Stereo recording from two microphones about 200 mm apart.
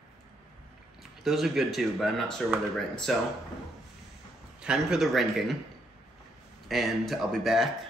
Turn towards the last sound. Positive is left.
turn(degrees=0)  # may be behind; listen again after turning